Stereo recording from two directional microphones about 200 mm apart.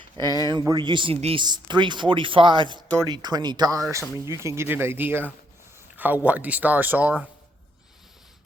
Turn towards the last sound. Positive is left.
turn(degrees=-5)  # may be behind; listen again after turning